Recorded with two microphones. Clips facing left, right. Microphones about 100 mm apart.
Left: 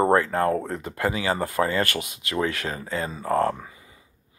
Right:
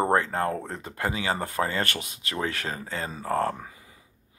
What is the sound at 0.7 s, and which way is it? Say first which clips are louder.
Speech: left 4 dB; 30° right (ahead or behind).